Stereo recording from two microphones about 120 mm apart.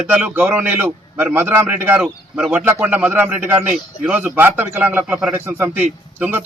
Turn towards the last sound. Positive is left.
turn(degrees=-15)  # may be behind; listen again after turning